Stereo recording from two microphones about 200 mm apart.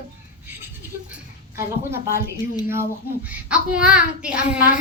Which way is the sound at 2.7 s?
10° right (ahead or behind).